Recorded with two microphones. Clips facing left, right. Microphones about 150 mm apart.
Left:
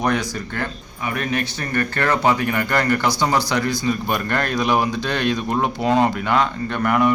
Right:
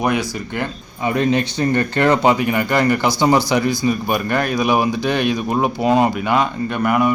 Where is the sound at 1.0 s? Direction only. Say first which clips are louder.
Right 6 dB; 25° right (ahead or behind).